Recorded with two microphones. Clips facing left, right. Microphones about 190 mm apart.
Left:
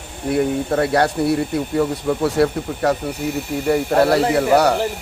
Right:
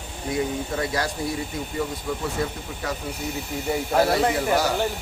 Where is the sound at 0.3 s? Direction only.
60° left (ahead or behind).